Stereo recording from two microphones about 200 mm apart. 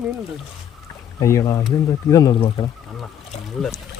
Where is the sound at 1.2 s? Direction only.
15° left (ahead or behind).